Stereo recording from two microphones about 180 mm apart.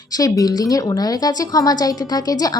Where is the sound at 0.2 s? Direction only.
20° left (ahead or behind).